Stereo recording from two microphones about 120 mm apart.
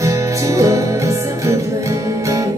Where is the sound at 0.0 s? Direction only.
25° right (ahead or behind).